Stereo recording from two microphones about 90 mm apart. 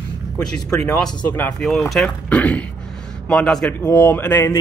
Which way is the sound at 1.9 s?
5° left (ahead or behind).